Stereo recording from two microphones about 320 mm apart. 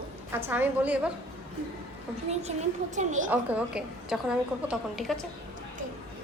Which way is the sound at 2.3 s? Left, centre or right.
Right.